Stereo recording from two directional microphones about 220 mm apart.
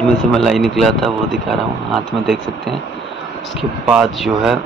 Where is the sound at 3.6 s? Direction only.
Centre (ahead or behind).